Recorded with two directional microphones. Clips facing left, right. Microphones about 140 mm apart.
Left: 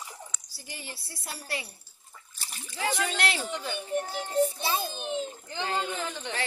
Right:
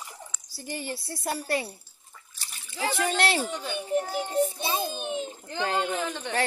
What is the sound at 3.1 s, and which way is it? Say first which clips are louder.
Speech: right 5 dB; 40° right (ahead or behind).